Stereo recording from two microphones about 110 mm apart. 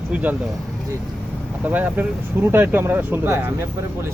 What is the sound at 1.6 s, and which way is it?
Speech, 15° right (ahead or behind).